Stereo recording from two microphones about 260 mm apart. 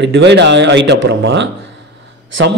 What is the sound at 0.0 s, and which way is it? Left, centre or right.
A man's voice, right.